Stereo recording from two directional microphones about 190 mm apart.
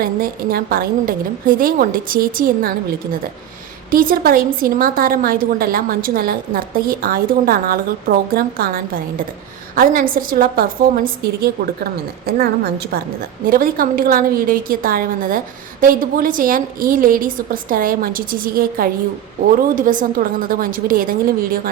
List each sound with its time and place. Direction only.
0.0 s a woman's voice: 50° right (ahead or behind)
3.9 s a woman's voice: 50° right (ahead or behind)